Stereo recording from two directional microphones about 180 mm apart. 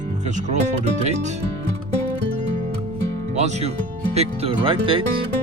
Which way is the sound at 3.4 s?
40° right (ahead or behind).